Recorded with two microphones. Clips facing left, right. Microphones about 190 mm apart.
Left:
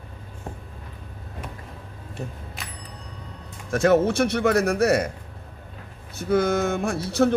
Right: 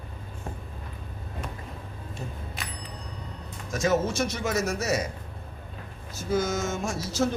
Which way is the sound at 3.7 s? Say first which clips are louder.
Left 7 dB; 60° left (ahead or behind).